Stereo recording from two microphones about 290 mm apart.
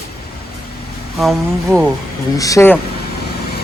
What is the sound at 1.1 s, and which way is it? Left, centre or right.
Speech, centre.